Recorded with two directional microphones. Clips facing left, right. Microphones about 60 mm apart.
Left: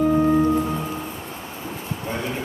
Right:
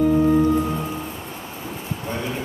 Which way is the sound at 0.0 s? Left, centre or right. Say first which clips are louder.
Right 1 dB; centre.